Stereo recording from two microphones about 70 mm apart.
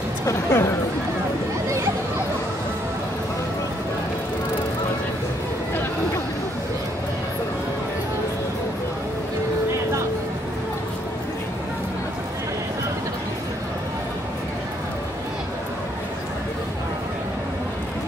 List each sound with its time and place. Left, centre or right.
0.2 s speech: left